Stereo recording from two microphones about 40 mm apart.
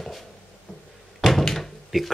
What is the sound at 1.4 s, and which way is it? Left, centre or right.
Door, centre.